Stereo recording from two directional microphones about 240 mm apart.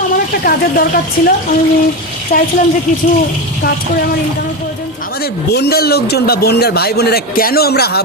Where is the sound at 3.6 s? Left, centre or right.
Left.